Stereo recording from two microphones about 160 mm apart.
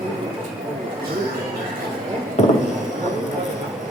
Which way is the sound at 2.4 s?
45° left (ahead or behind).